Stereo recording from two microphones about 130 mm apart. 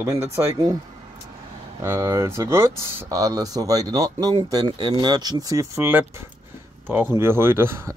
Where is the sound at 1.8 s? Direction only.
20° right (ahead or behind).